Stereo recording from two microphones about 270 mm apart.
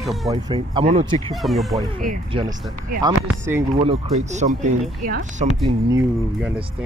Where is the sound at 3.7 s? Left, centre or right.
Right.